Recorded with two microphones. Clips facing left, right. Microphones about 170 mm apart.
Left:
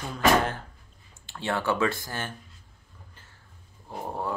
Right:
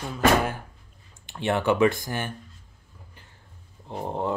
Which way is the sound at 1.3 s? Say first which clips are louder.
Right 4 dB; 20° right (ahead or behind).